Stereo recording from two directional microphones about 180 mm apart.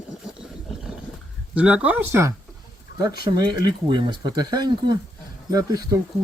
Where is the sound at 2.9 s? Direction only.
70° left (ahead or behind).